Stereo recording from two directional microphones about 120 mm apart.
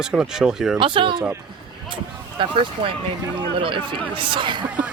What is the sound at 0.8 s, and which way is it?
Speech, 45° right (ahead or behind).